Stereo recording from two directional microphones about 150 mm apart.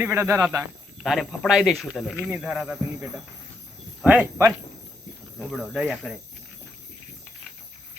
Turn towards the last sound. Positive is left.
turn(degrees=-5)  # may be behind; listen again after turning